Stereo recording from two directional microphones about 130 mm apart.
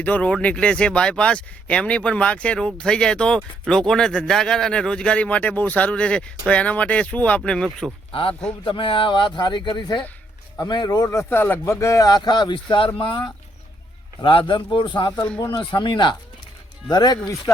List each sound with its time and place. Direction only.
0.0 s speech: 10° left (ahead or behind)
8.1 s a man's voice: 45° left (ahead or behind)